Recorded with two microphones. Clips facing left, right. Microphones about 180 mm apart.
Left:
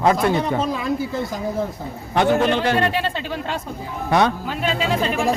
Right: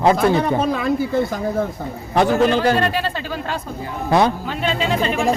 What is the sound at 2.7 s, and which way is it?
Speech, centre (ahead or behind).